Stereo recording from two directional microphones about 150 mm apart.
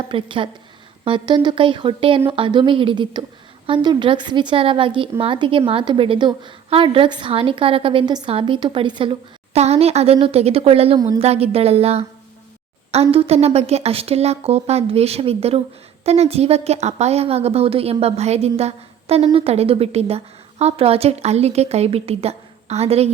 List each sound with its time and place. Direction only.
0.1 s a woman's voice: 35° right (ahead or behind)